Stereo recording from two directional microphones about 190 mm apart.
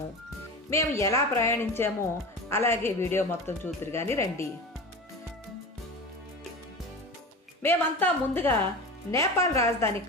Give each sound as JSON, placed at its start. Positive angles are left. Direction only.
{"t": 0.7, "sound": "speech", "side_deg": 15}
{"t": 7.6, "sound": "speech", "side_deg": 10}